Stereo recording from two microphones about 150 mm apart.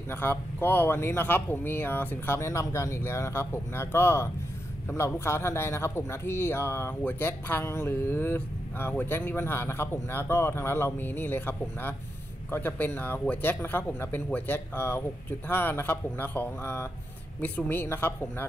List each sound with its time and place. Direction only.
0.1 s a man's voice: 15° left (ahead or behind)